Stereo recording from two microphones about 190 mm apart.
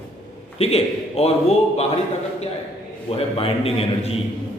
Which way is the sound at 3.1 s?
30° left (ahead or behind).